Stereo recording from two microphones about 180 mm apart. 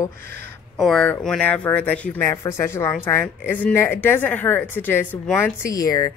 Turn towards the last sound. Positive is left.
turn(degrees=20)  # may be behind; listen again after turning